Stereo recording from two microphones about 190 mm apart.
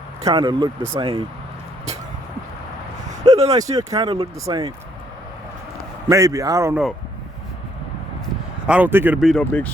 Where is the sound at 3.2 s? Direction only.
35° right (ahead or behind).